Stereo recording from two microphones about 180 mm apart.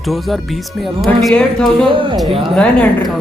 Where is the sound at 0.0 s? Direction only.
Centre (ahead or behind).